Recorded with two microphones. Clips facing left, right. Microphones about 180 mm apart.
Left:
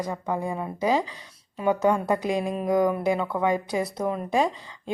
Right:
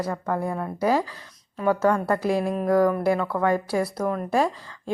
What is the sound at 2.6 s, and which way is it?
Speech, 15° left (ahead or behind).